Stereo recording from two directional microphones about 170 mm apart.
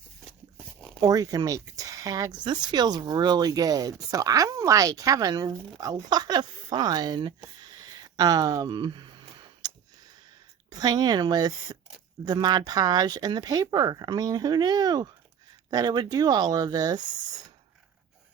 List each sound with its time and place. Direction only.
1.0 s speech: 20° right (ahead or behind)
9.6 s a sound: 25° right (ahead or behind)
10.7 s speech: 20° right (ahead or behind)